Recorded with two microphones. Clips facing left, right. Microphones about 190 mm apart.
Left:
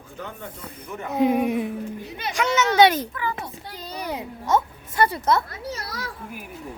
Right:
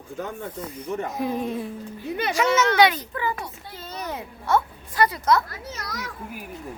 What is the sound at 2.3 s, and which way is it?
Speech, centre (ahead or behind).